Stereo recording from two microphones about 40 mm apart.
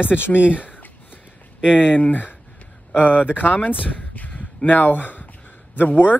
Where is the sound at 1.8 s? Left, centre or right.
Left.